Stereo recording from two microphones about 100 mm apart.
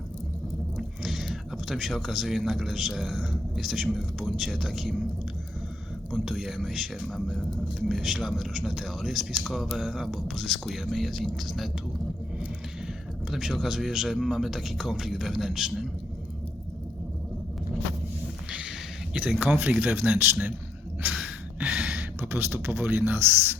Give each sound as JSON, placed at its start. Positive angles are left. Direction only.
{"t": 0.8, "sound": "speech", "side_deg": 0}
{"t": 6.1, "sound": "speech", "side_deg": 0}
{"t": 13.3, "sound": "speech", "side_deg": -5}
{"t": 19.4, "sound": "speech", "side_deg": -15}
{"t": 21.1, "sound": "a sound", "side_deg": -5}
{"t": 22.2, "sound": "speech", "side_deg": -25}